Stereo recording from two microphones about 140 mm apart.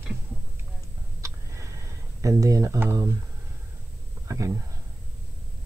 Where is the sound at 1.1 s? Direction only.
20° right (ahead or behind).